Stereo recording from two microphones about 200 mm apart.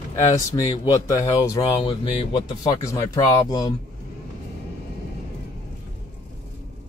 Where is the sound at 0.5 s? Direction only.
20° left (ahead or behind).